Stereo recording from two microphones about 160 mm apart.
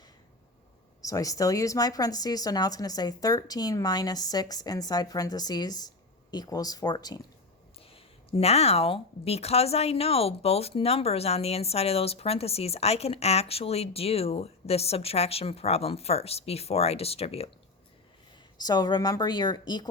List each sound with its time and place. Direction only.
1.0 s speech: 20° left (ahead or behind)
7.8 s a woman's voice: 35° left (ahead or behind)
18.5 s speech: 25° left (ahead or behind)